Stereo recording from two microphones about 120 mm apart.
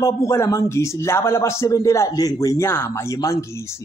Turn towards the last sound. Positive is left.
turn(degrees=30)  # may be behind; listen again after turning